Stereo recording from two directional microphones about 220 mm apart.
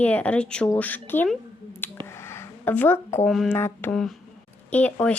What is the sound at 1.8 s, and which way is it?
Finger snapping, 10° left (ahead or behind).